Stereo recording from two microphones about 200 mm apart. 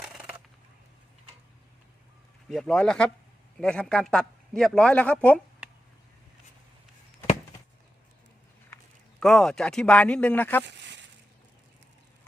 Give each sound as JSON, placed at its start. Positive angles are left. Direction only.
{"t": 0.0, "sound": "a sound", "side_deg": -5}
{"t": 2.5, "sound": "speech", "side_deg": 0}
{"t": 9.2, "sound": "speech", "side_deg": 0}
{"t": 10.7, "sound": "speech", "side_deg": -60}